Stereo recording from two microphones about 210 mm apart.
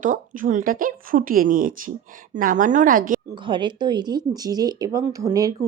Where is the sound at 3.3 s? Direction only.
25° right (ahead or behind).